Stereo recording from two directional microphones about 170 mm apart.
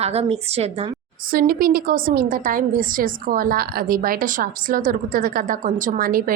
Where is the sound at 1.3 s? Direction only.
60° right (ahead or behind).